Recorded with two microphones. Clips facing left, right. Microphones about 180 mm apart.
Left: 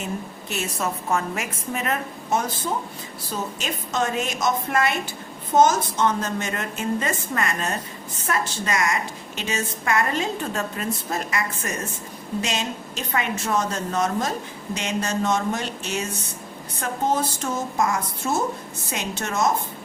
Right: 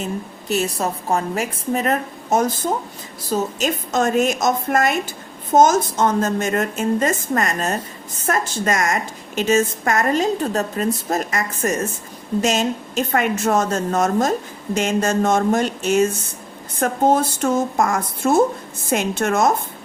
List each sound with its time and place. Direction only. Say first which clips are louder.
0.4 s a woman's voice: right 7 dB; 35° right (ahead or behind); by 19.5 s 55° right (ahead or behind)